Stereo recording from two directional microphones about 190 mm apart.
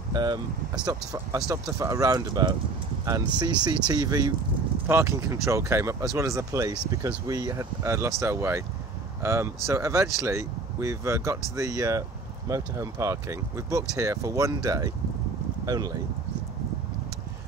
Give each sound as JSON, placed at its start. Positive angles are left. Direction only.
{"t": 0.1, "sound": "speech", "side_deg": -20}